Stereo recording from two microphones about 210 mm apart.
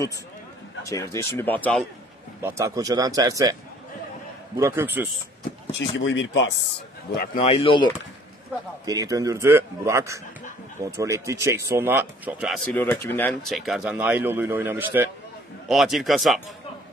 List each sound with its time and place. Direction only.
0.8 s speech: 15° left (ahead or behind)
2.4 s speech: 15° right (ahead or behind)
4.6 s speech: 10° right (ahead or behind)
5.7 s speech: 60° left (ahead or behind)
7.4 s speech: 25° left (ahead or behind)
8.8 s speech: 15° right (ahead or behind)
12.7 s speech: 10° left (ahead or behind)